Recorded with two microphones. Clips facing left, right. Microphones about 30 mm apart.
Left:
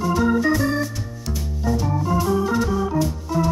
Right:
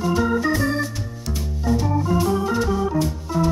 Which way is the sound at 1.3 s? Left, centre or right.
Centre.